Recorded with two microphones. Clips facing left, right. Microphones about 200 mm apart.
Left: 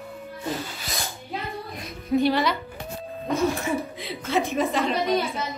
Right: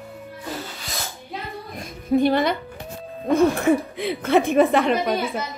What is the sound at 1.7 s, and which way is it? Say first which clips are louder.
Music: right 4 dB; 50° right (ahead or behind).